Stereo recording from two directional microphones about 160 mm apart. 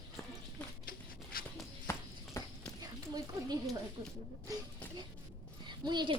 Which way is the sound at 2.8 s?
25° right (ahead or behind).